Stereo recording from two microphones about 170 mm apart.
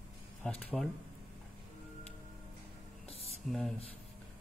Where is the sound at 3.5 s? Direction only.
5° left (ahead or behind).